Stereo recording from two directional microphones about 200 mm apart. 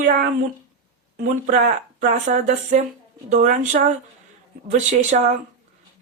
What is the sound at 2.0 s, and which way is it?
Speech, 40° right (ahead or behind).